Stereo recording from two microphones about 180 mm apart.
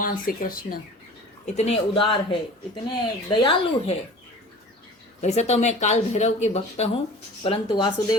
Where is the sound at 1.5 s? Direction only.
35° left (ahead or behind).